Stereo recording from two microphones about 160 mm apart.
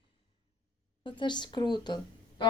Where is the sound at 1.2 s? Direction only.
30° left (ahead or behind).